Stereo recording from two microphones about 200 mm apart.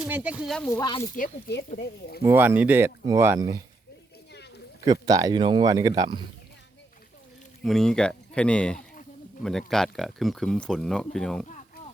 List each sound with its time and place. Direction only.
0.0 s speech: 5° right (ahead or behind)
0.7 s speech: 20° left (ahead or behind)
1.1 s speech: 50° left (ahead or behind)
2.2 s speech: 10° right (ahead or behind)
4.9 s speech: 20° right (ahead or behind)
7.6 s speech: centre (ahead or behind)